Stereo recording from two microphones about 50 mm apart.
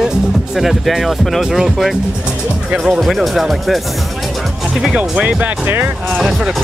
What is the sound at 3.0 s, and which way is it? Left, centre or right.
Speech, centre.